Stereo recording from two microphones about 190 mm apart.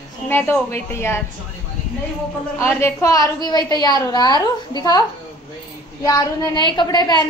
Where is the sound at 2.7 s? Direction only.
15° left (ahead or behind).